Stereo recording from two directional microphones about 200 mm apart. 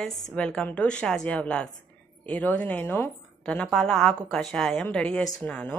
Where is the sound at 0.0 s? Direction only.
5° left (ahead or behind).